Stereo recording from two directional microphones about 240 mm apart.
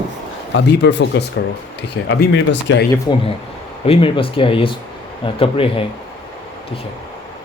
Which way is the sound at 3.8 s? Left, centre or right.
Left.